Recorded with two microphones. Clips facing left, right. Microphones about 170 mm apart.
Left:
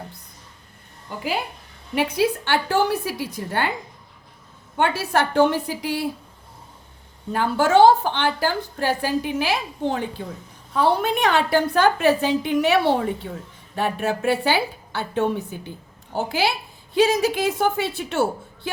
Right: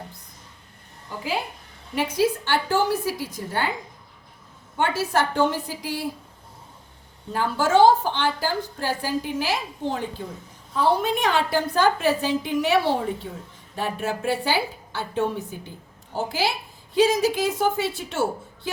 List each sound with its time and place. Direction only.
2.0 s a woman's voice: 65° left (ahead or behind)
4.8 s a woman's voice: 65° left (ahead or behind)
7.3 s a woman's voice: 65° left (ahead or behind)